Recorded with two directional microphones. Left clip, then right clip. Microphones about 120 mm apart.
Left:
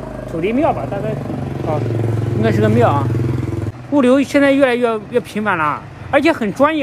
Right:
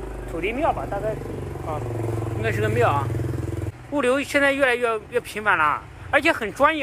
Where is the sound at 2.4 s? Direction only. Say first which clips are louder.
Left 9 dB; 35° left (ahead or behind).